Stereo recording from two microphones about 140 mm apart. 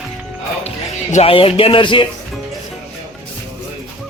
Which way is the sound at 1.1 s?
45° left (ahead or behind).